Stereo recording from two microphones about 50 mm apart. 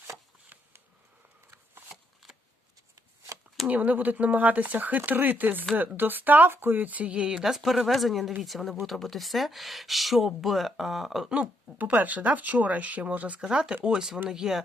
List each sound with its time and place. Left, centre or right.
1.5 s a sound: right
2.2 s shuffling cards: centre
3.7 s speech: right
7.4 s speech: centre
11.8 s speech: right
13.4 s speech: centre